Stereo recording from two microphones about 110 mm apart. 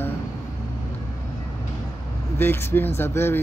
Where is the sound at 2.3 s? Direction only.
20° left (ahead or behind).